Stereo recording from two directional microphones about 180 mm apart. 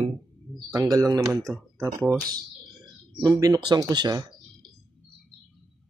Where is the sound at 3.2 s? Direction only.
20° right (ahead or behind).